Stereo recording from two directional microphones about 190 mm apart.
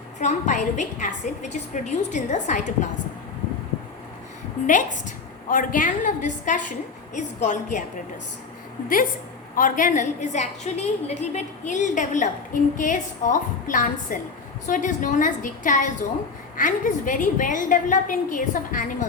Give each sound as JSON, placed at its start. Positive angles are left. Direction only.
{"t": 0.2, "sound": "a woman's voice", "side_deg": 40}
{"t": 4.6, "sound": "a woman's voice", "side_deg": 40}
{"t": 9.6, "sound": "a woman's voice", "side_deg": 45}